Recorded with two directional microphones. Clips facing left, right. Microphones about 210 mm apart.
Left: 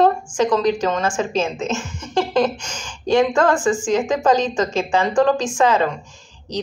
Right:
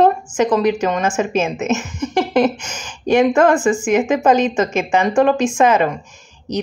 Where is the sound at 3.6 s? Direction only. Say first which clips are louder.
Right 3 dB; 10° right (ahead or behind).